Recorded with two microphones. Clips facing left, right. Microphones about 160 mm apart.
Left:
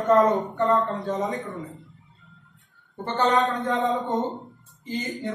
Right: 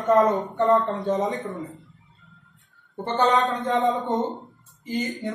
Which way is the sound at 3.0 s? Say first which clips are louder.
Right 2 dB; 20° right (ahead or behind).